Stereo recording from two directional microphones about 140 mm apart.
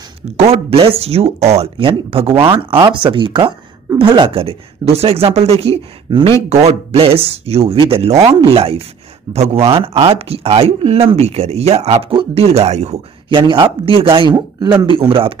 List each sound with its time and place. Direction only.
0.4 s speech: 45° right (ahead or behind)
6.0 s speech: 35° right (ahead or behind)
6.5 s speech: 50° right (ahead or behind)
13.3 s speech: 35° right (ahead or behind)